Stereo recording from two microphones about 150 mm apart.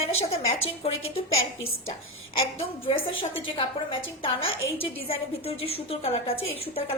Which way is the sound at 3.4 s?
35° left (ahead or behind).